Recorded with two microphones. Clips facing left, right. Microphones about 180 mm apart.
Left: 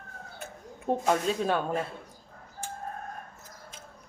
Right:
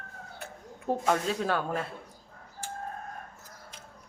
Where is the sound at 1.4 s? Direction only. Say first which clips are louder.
Left 2 dB; 20° left (ahead or behind).